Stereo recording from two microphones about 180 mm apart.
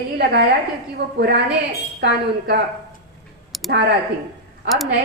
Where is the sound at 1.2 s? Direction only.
70° right (ahead or behind).